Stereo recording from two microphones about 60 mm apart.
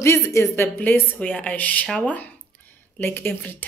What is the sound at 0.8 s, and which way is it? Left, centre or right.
Speech, left.